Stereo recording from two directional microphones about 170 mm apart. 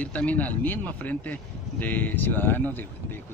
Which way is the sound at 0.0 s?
5° left (ahead or behind).